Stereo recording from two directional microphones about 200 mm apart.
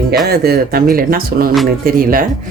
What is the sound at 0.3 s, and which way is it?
Speech, 50° right (ahead or behind).